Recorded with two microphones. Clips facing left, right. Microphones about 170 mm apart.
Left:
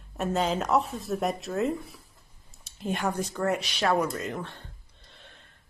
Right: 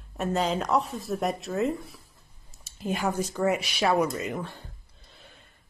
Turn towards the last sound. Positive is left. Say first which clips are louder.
# right 2 dB
turn(degrees=-5)  # may be behind; listen again after turning